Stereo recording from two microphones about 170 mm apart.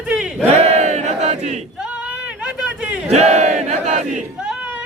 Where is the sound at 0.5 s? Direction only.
40° right (ahead or behind).